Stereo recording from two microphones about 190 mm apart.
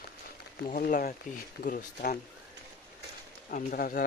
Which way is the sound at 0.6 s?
45° left (ahead or behind).